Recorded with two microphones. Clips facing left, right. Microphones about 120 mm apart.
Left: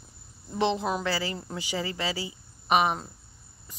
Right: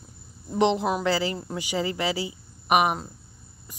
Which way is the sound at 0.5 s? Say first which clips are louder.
Right 4 dB; 15° right (ahead or behind).